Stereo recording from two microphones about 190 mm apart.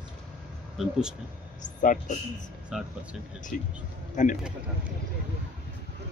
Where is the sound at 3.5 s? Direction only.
45° left (ahead or behind).